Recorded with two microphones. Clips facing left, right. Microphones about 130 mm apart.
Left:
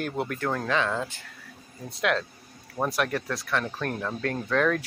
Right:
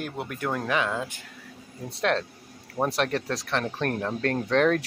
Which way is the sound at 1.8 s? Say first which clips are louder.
Right 1 dB; 30° right (ahead or behind).